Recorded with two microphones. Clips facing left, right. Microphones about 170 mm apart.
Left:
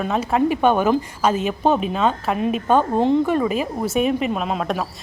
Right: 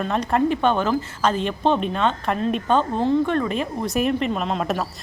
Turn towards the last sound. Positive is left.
turn(degrees=5)  # may be behind; listen again after turning